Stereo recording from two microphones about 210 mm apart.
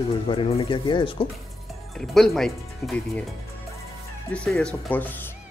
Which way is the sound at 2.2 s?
Centre (ahead or behind).